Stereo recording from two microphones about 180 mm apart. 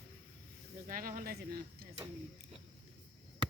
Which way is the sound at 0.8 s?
50° right (ahead or behind).